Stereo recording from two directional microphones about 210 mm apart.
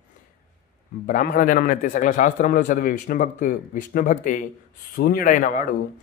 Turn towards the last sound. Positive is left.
turn(degrees=40)  # may be behind; listen again after turning